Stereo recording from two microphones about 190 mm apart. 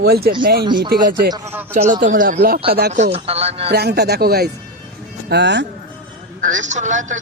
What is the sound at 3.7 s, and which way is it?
Speech, 60° right (ahead or behind).